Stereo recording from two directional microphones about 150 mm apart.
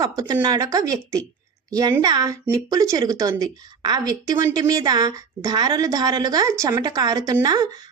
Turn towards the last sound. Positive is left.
turn(degrees=-25)  # may be behind; listen again after turning